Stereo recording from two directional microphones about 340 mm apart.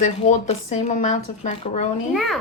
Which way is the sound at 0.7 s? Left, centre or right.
Left.